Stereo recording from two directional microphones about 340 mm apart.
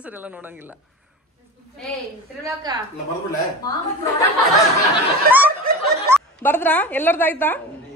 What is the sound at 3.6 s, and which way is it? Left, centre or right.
Speech, centre.